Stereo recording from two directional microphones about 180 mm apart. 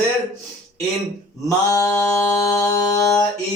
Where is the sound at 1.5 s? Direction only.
20° left (ahead or behind).